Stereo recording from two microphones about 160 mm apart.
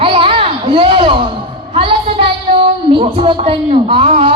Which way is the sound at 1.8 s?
35° right (ahead or behind).